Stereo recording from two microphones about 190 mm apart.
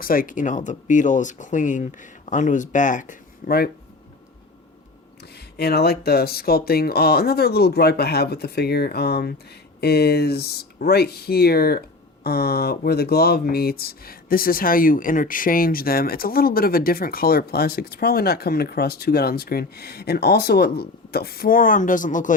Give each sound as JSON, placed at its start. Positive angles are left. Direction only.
{"t": 0.0, "sound": "speech", "side_deg": 50}
{"t": 5.5, "sound": "speech", "side_deg": 55}